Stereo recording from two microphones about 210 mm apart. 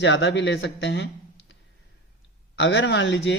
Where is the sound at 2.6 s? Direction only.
60° left (ahead or behind).